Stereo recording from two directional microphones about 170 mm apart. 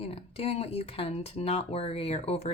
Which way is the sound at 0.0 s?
35° left (ahead or behind).